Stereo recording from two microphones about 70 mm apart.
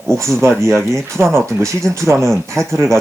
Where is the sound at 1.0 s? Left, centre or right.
Right.